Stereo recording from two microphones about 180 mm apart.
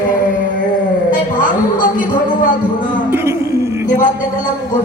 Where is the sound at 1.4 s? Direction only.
45° left (ahead or behind).